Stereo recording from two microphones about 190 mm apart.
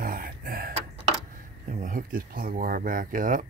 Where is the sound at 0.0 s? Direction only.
50° right (ahead or behind).